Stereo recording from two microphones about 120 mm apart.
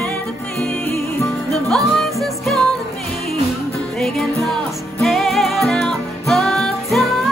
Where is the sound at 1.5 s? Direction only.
5° left (ahead or behind).